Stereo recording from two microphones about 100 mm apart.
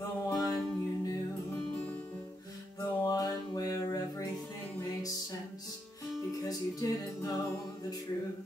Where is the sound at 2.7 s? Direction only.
35° left (ahead or behind).